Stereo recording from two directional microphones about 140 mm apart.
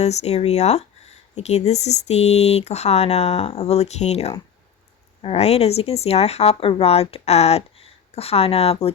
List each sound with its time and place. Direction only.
0.0 s speech: 50° left (ahead or behind)